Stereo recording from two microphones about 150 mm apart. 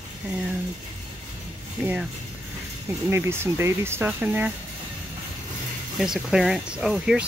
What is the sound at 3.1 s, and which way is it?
Speech, 15° right (ahead or behind).